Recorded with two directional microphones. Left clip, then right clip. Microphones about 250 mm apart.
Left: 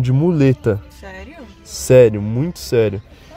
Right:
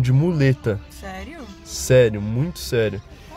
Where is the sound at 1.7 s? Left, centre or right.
Centre.